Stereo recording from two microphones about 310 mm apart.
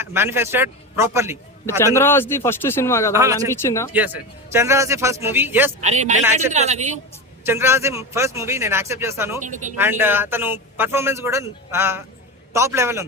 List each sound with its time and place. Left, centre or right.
0.0 s speech: centre
1.8 s a man's voice: centre
3.1 s speech: centre
3.5 s a man's voice: centre
3.9 s speech: centre
5.8 s speech: right
7.4 s speech: centre
9.4 s speech: right
9.7 s speech: centre